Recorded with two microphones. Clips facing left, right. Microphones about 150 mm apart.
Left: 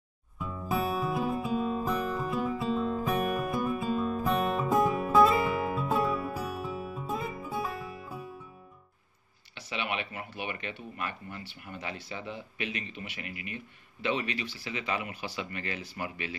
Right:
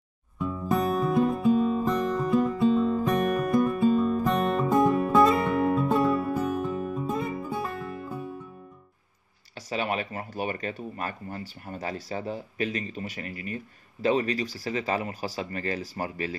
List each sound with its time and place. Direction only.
0.4 s music: centre (ahead or behind)
9.6 s speech: 40° right (ahead or behind)